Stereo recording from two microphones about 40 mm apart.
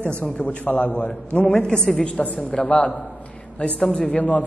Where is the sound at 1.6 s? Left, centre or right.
Centre.